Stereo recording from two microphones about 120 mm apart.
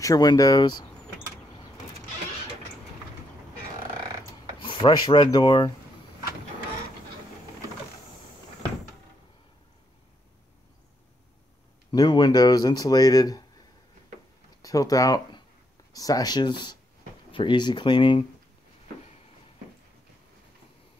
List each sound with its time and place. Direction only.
0.0 s speech: 30° left (ahead or behind)
4.6 s speech: 40° left (ahead or behind)
11.9 s speech: 35° left (ahead or behind)
14.6 s speech: 30° left (ahead or behind)